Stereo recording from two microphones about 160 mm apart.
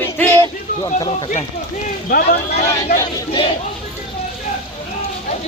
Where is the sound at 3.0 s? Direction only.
35° left (ahead or behind).